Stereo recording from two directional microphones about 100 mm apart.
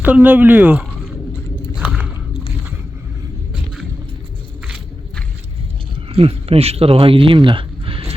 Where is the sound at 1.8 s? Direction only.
20° right (ahead or behind).